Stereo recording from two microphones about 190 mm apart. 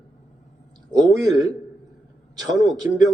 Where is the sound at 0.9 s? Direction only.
20° right (ahead or behind).